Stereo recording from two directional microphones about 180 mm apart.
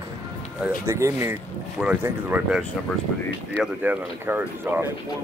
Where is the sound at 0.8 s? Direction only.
15° right (ahead or behind).